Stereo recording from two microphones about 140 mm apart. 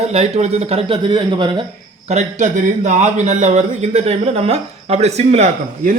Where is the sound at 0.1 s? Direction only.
50° right (ahead or behind); by 1.6 s 35° right (ahead or behind).